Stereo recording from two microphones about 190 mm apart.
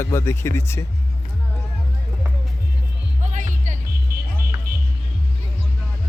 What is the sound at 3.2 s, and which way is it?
Music, 40° right (ahead or behind).